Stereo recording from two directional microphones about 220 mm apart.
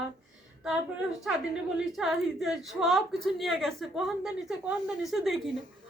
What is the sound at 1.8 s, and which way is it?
A woman's voice, centre (ahead or behind).